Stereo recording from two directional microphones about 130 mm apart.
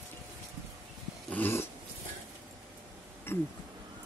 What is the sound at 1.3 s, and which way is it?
Dog, 15° left (ahead or behind).